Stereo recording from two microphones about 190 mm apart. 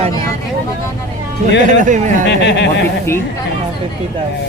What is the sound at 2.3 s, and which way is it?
Speech, 65° left (ahead or behind).